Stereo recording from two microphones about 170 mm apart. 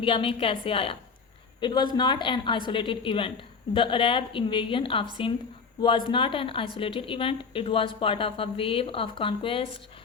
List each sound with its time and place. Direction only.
0.0 s a woman's voice: 30° left (ahead or behind)